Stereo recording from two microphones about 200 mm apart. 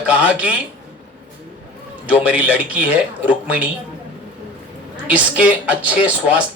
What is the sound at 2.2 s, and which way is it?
A man's voice, 5° right (ahead or behind).